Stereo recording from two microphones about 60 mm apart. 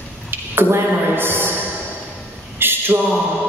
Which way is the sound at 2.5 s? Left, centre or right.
Right.